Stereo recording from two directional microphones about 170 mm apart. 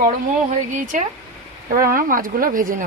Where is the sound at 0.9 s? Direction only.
50° right (ahead or behind).